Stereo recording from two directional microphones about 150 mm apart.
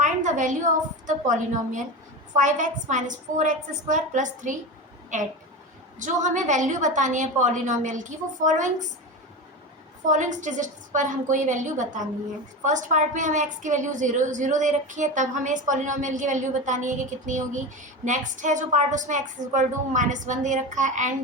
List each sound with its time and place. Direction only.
0.0 s a sound: 55° right (ahead or behind)
2.3 s a woman's voice: 55° right (ahead or behind)
10.0 s a woman's voice: 55° right (ahead or behind)